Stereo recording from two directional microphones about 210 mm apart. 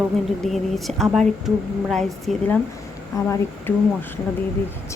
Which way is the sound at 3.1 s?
15° left (ahead or behind).